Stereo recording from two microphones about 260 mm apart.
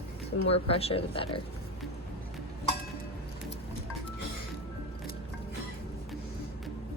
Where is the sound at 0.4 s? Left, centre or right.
Left.